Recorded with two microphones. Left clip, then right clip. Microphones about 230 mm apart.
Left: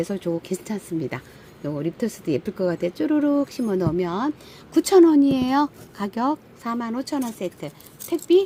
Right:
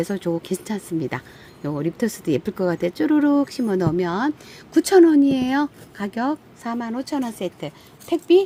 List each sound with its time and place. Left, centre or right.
0.0 s speech: centre